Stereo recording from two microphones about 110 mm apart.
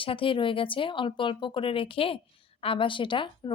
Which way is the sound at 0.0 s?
55° left (ahead or behind).